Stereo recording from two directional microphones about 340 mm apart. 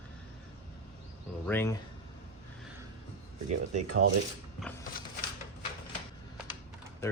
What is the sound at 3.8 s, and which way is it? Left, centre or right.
Cutlery, right.